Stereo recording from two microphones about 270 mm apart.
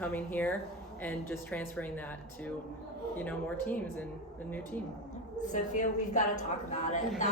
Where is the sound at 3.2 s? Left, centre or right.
Centre.